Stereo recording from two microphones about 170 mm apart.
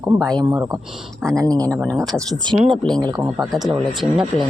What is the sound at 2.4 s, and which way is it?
Speech, 30° right (ahead or behind).